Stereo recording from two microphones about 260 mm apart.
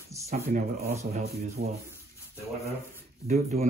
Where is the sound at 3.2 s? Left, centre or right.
Right.